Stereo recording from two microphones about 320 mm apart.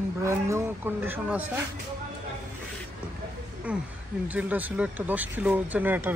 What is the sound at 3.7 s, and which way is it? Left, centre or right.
Speech, centre.